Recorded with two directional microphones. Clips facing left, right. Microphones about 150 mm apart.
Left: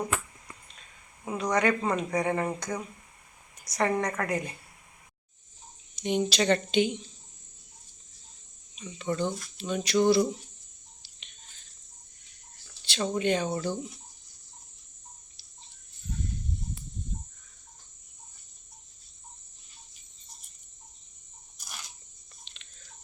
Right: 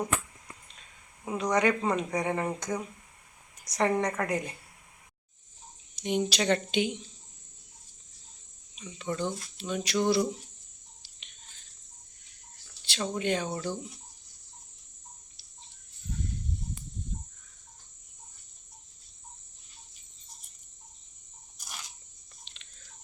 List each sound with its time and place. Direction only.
1.4 s a woman's voice: 15° right (ahead or behind)
6.0 s speech: 10° right (ahead or behind)
8.7 s speech: 5° right (ahead or behind)
12.8 s speech: 5° right (ahead or behind)